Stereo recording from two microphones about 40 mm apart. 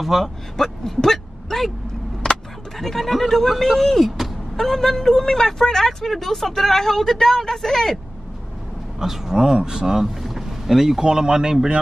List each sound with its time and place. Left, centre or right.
0.0 s speech: centre
0.6 s speech: centre
2.2 s a sound: centre
2.8 s speech: centre
9.0 s speech: centre